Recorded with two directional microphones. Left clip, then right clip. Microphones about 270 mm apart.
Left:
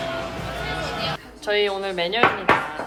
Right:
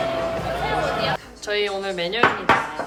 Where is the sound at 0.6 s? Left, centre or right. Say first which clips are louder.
Right 5 dB; centre.